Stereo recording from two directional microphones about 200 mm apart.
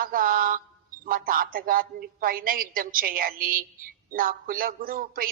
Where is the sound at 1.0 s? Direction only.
45° right (ahead or behind).